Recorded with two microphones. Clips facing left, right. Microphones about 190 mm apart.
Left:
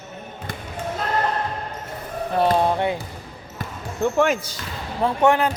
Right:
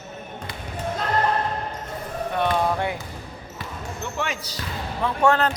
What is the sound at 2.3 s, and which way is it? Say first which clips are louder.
Basketball bounce: left 4 dB; 30° left (ahead or behind).